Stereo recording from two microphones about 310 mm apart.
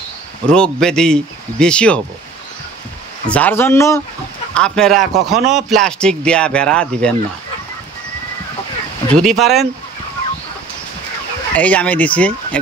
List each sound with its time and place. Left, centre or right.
0.5 s speech: centre
3.3 s speech: centre
9.1 s speech: centre
11.5 s speech: centre